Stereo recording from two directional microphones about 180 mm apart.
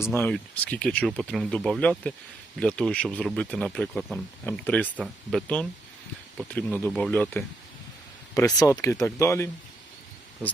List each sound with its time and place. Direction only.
0.0 s speech: 10° left (ahead or behind)